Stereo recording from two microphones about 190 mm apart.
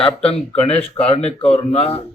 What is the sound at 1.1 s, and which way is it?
Speech, 30° left (ahead or behind).